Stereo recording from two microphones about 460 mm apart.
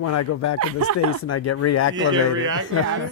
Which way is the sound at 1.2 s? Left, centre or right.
Left.